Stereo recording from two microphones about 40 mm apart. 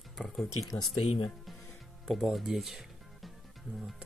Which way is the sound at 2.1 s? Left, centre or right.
Centre.